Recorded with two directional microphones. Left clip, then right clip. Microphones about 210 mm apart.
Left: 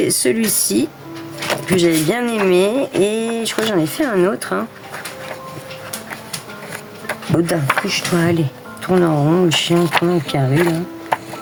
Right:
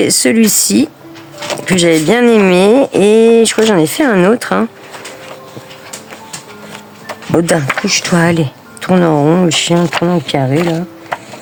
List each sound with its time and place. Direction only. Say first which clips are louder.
0.0 s speech: right 6 dB; 50° right (ahead or behind)
7.3 s speech: right 5 dB; 50° right (ahead or behind)